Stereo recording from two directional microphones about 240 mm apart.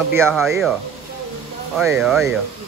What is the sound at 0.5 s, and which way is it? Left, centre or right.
Speech, centre.